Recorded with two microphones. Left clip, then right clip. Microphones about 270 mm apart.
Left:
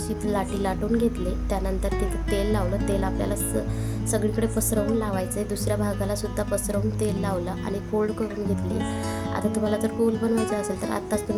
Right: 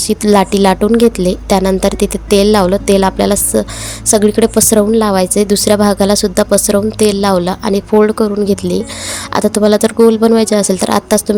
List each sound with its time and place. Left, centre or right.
0.1 s a woman's voice: left